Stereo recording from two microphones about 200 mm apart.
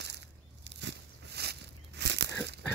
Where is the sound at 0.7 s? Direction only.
60° right (ahead or behind).